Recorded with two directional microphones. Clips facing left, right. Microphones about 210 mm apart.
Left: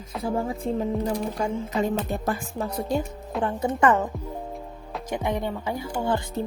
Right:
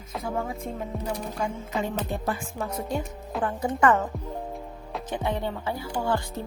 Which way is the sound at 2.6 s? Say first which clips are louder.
Left 3 dB; 35° left (ahead or behind).